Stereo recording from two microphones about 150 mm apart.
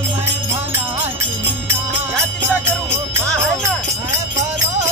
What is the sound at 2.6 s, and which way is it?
Music, 15° right (ahead or behind).